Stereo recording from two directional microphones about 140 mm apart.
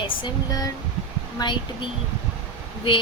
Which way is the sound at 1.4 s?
30° left (ahead or behind).